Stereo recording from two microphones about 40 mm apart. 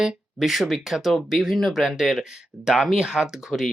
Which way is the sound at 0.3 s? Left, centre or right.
Centre.